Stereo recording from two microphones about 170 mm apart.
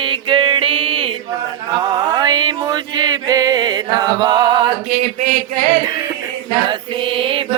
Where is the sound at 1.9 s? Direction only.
25° right (ahead or behind).